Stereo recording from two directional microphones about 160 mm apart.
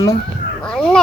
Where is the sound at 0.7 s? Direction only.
5° left (ahead or behind).